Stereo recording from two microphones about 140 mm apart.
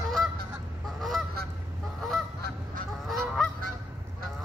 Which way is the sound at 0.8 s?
Centre (ahead or behind).